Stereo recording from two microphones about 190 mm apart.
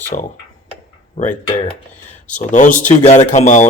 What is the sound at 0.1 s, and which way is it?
Speech, 35° left (ahead or behind).